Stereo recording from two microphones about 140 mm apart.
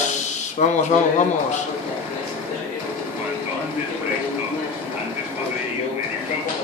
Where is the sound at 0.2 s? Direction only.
60° left (ahead or behind).